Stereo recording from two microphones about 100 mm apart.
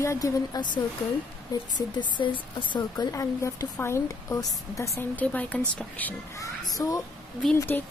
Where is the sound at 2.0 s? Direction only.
55° left (ahead or behind).